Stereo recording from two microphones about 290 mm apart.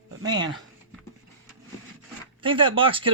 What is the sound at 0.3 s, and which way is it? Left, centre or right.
Speech, centre.